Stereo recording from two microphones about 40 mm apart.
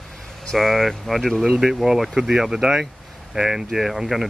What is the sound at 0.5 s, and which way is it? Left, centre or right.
Speech, centre.